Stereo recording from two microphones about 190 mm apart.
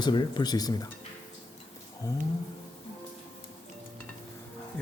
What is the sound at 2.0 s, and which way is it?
Speech, 20° left (ahead or behind).